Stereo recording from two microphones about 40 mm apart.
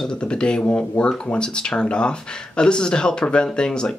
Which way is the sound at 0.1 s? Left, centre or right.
Left.